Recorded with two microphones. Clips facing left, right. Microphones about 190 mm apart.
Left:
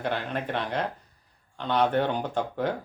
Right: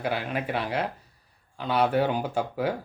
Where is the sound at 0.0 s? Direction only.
5° right (ahead or behind).